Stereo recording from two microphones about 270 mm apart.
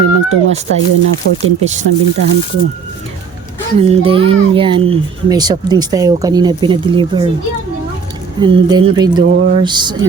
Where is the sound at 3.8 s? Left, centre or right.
Right.